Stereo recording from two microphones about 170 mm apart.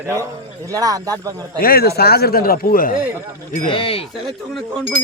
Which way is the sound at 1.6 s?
60° left (ahead or behind).